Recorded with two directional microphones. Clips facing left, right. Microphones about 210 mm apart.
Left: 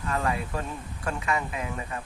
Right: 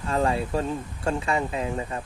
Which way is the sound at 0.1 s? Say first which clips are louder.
Right 5 dB; 30° right (ahead or behind).